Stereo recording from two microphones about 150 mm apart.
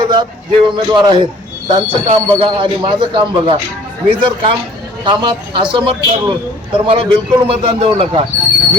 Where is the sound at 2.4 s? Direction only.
35° right (ahead or behind).